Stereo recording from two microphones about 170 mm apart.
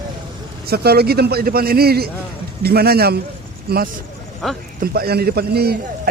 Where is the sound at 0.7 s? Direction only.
70° right (ahead or behind).